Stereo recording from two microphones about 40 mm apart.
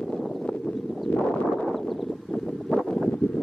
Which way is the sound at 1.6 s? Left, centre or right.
Centre.